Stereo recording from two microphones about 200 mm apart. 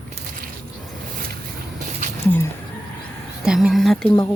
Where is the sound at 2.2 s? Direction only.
10° left (ahead or behind).